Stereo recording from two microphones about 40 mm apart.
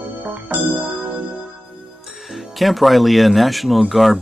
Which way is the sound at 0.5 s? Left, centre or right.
Right.